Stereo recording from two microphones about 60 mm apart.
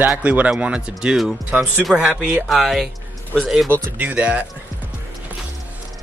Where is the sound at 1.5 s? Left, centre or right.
Right.